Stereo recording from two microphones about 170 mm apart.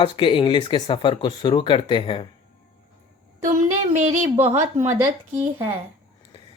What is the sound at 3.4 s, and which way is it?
A woman's voice, 45° right (ahead or behind).